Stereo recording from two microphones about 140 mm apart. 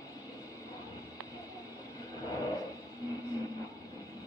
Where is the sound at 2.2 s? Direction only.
25° left (ahead or behind).